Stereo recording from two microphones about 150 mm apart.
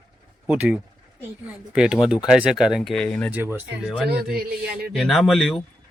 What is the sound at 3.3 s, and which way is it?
Speech, 15° right (ahead or behind).